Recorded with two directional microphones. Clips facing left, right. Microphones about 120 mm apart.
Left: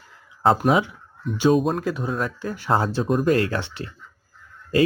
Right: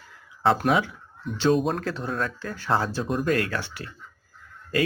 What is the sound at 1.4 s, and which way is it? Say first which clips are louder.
Speech: left 3 dB; 5° left (ahead or behind).